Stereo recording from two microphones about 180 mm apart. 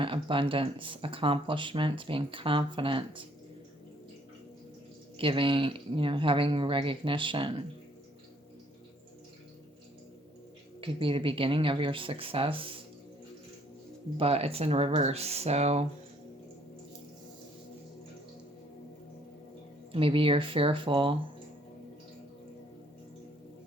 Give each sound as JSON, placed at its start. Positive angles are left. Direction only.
{"t": 0.0, "sound": "speech", "side_deg": -30}
{"t": 5.1, "sound": "speech", "side_deg": -30}
{"t": 10.8, "sound": "speech", "side_deg": -30}
{"t": 14.2, "sound": "speech", "side_deg": -35}
{"t": 19.9, "sound": "speech", "side_deg": -30}